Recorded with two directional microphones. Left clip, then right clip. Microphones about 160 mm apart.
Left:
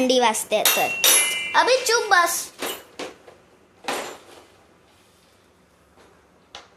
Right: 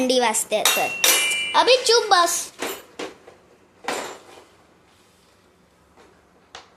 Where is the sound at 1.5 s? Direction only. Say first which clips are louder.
Right 2 dB; 20° right (ahead or behind).